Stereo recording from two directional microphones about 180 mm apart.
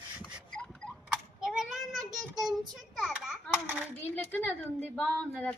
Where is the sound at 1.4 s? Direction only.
Centre (ahead or behind).